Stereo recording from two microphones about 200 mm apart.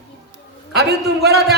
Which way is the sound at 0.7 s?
55° right (ahead or behind).